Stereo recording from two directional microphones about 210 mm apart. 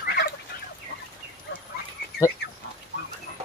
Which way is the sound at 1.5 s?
60° left (ahead or behind).